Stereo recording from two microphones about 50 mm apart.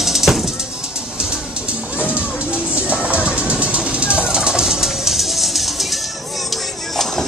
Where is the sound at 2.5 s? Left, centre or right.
Right.